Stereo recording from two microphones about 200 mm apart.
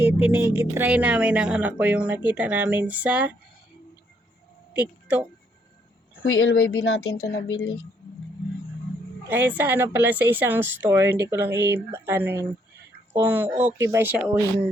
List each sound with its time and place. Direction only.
0.0 s speech: 10° right (ahead or behind)
4.7 s a sound: 5° right (ahead or behind)
6.2 s speech: 90° left
6.5 s speech: 55° left (ahead or behind)
9.3 s speech: 10° right (ahead or behind)